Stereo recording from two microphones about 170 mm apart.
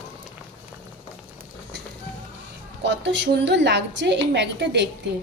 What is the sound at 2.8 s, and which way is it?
A woman's voice, 90° right.